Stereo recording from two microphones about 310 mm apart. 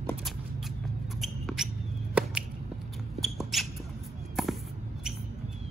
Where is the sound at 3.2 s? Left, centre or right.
Centre.